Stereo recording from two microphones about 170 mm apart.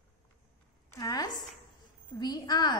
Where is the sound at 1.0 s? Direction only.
20° left (ahead or behind).